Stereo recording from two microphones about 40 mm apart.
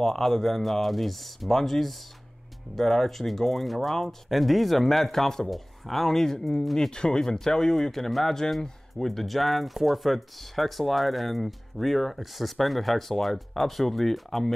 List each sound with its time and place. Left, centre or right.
0.0 s speech: centre
6.9 s speech: left; by 14.5 s centre